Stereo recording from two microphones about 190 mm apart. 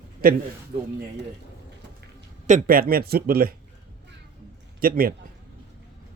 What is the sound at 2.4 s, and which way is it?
A man's voice, 45° right (ahead or behind).